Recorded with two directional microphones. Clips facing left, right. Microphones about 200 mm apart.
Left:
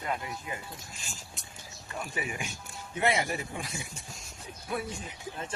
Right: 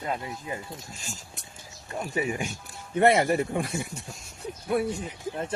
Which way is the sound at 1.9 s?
40° right (ahead or behind).